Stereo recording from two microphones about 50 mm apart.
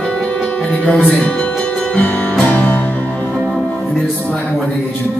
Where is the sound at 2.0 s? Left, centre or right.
Left.